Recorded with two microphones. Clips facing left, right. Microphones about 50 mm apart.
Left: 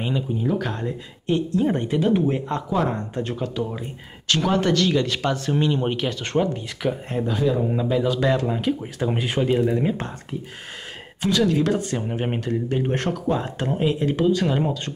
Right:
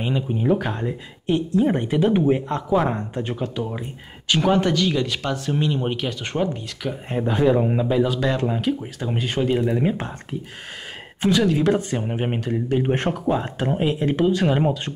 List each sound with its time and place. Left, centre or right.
0.6 s speech: centre
6.8 s speech: centre
7.2 s a man's voice: right
7.7 s speech: centre
8.5 s speech: centre
9.7 s speech: centre
11.1 s speech: centre
12.8 s speech: right